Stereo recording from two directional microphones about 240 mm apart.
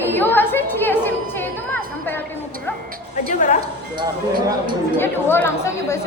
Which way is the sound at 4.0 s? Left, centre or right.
Centre.